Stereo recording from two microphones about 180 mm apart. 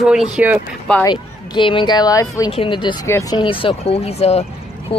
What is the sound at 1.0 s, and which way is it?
Speech, 25° left (ahead or behind).